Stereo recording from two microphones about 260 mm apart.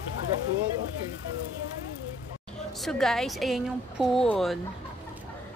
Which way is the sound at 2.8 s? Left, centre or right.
Centre.